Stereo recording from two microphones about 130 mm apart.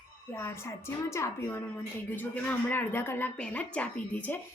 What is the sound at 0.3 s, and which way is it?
A woman's voice, 20° left (ahead or behind).